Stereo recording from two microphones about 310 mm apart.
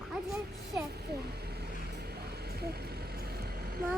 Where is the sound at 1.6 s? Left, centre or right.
Right.